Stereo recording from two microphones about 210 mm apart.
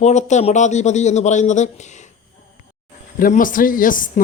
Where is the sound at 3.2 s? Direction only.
40° left (ahead or behind).